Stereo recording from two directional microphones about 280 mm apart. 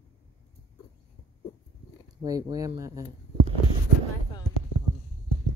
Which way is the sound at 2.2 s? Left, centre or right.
Centre.